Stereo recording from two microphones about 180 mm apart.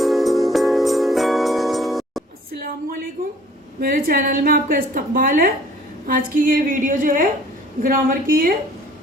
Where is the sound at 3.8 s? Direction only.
55° right (ahead or behind).